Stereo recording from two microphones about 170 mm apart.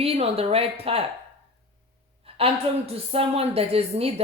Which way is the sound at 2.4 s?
35° right (ahead or behind).